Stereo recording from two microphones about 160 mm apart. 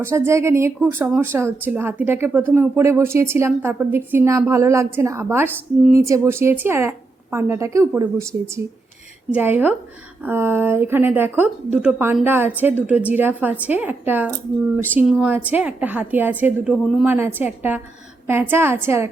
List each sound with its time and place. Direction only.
0.0 s speech: 15° right (ahead or behind)
16.8 s a woman's voice: centre (ahead or behind)
17.1 s speech: 10° right (ahead or behind)